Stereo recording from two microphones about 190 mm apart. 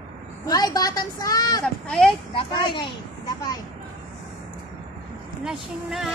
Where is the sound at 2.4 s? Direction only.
25° left (ahead or behind).